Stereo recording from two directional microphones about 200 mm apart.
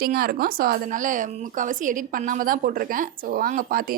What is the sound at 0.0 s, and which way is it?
A woman's voice, 50° right (ahead or behind).